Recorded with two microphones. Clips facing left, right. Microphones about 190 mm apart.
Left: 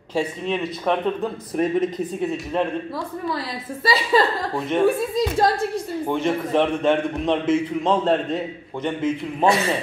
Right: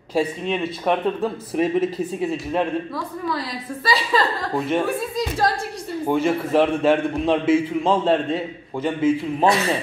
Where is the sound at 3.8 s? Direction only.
25° left (ahead or behind).